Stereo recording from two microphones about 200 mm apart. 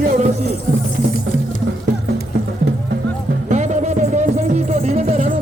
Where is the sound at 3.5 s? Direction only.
35° right (ahead or behind).